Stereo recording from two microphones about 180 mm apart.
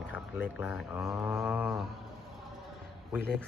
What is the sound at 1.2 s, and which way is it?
Speech, 15° right (ahead or behind).